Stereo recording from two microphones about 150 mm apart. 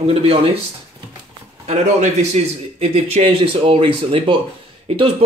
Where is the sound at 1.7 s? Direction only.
50° right (ahead or behind).